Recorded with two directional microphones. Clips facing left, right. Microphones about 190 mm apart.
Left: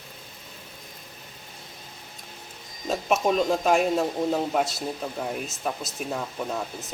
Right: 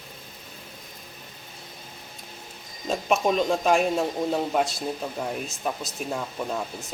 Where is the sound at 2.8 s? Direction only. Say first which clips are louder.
Even; centre (ahead or behind).